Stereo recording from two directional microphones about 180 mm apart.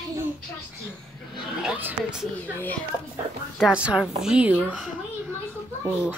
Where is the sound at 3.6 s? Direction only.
5° right (ahead or behind).